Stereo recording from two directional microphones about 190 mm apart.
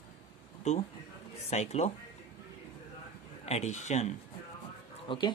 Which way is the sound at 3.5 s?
35° left (ahead or behind).